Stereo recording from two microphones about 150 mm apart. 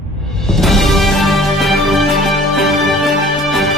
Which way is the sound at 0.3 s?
Centre (ahead or behind).